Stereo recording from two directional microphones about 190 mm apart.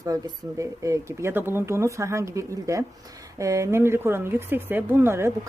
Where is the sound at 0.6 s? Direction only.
15° right (ahead or behind).